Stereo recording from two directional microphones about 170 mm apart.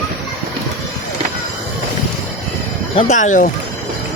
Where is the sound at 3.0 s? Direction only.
45° left (ahead or behind).